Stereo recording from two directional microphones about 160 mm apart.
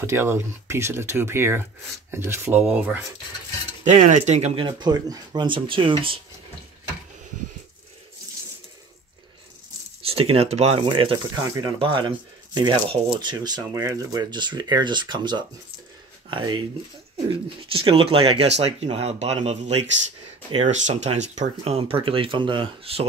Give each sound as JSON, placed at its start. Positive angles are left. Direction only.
{"t": 0.0, "sound": "speech", "side_deg": -15}
{"t": 3.8, "sound": "speech", "side_deg": -50}
{"t": 4.6, "sound": "speech", "side_deg": -25}
{"t": 10.0, "sound": "speech", "side_deg": -35}